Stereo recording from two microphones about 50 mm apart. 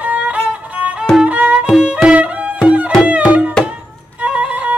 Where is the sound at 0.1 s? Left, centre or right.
Right.